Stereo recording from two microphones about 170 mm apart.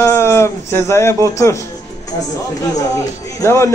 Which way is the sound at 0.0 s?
15° left (ahead or behind).